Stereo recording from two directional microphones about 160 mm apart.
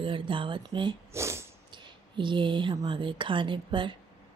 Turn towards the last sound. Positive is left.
turn(degrees=-30)  # may be behind; listen again after turning